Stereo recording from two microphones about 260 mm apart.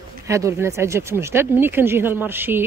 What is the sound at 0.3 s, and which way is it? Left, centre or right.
A woman's voice, centre.